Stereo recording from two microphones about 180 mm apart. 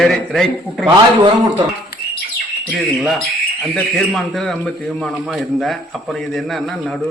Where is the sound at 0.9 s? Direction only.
25° right (ahead or behind).